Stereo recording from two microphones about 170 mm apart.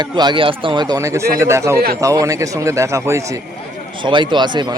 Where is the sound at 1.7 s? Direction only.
65° right (ahead or behind).